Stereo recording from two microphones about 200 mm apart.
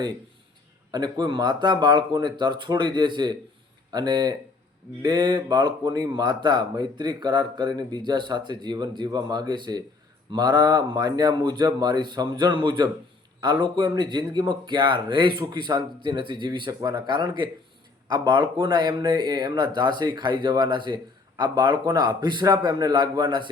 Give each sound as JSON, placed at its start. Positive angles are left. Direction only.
{"t": 0.9, "sound": "speech", "side_deg": -20}